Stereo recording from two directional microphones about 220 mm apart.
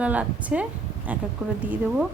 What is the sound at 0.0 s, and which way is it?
Speech, 5° right (ahead or behind).